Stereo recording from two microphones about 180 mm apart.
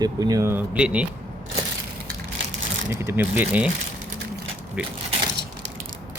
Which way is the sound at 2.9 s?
15° right (ahead or behind).